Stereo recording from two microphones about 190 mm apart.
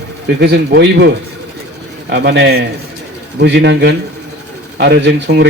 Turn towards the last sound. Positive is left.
turn(degrees=-65)  # may be behind; listen again after turning